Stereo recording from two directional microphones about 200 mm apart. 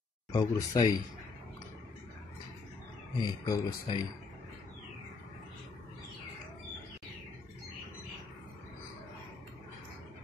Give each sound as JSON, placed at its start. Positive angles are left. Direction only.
{"t": 0.3, "sound": "speech", "side_deg": 20}
{"t": 3.2, "sound": "speech", "side_deg": 20}